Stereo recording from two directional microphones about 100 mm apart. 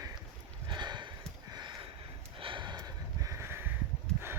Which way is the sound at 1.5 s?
50° right (ahead or behind).